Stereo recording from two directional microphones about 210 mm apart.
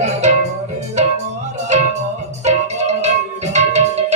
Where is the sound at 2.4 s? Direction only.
35° right (ahead or behind).